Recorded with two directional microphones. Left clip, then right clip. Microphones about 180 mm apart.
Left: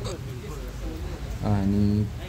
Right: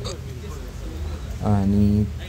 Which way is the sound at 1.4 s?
5° right (ahead or behind).